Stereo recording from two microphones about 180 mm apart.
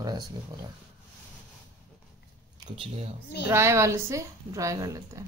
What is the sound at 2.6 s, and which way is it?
Speech, 35° right (ahead or behind).